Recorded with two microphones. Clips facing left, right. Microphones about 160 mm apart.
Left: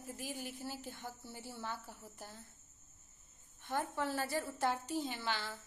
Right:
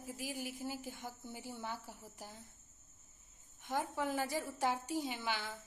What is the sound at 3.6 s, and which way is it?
A woman's voice, 10° right (ahead or behind).